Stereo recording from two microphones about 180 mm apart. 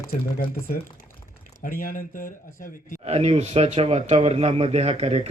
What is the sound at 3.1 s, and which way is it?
Speech, 35° right (ahead or behind).